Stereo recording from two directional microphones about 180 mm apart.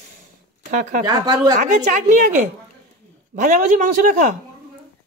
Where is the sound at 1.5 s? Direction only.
40° right (ahead or behind).